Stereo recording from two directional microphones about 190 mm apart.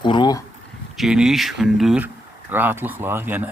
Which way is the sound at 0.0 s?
25° left (ahead or behind).